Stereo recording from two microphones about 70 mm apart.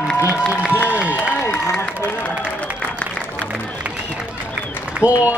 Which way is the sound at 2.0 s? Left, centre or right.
Left.